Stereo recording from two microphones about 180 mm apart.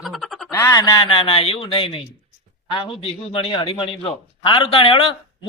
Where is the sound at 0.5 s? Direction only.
20° left (ahead or behind).